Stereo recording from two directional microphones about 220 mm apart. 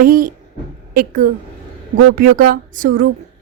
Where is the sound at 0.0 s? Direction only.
40° right (ahead or behind).